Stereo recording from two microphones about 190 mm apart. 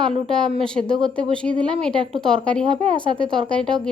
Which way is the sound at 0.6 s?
5° left (ahead or behind).